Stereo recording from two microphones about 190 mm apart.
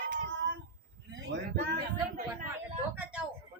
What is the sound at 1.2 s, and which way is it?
Speech, 65° right (ahead or behind).